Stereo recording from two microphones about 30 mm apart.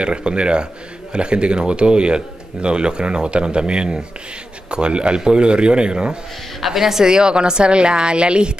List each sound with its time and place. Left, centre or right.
0.0 s speech: right
6.6 s a woman's voice: centre
7.1 s speech: right